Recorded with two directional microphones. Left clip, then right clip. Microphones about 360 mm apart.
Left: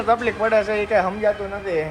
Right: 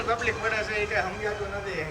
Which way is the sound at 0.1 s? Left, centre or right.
Centre.